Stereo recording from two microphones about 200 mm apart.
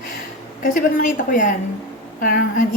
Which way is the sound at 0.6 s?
40° left (ahead or behind).